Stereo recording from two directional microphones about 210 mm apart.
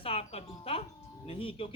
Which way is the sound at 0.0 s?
30° left (ahead or behind).